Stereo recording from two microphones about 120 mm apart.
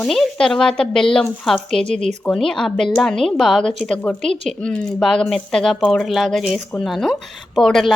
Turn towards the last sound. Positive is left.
turn(degrees=0)  # may be behind; listen again after turning